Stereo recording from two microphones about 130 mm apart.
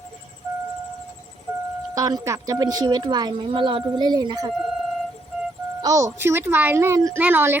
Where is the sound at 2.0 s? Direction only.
25° right (ahead or behind).